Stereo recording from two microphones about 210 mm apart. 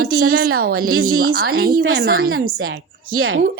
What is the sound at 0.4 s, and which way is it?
Speech, 45° right (ahead or behind).